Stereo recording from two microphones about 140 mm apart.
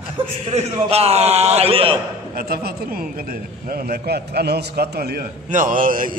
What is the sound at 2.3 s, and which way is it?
A man's voice, 90° right.